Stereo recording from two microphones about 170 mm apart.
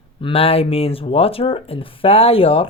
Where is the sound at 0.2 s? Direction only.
35° left (ahead or behind).